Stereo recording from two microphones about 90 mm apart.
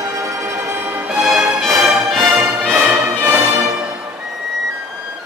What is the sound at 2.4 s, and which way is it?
Music, 30° right (ahead or behind).